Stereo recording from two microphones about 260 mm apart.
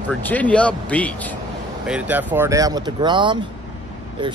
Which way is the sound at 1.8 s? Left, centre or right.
Centre.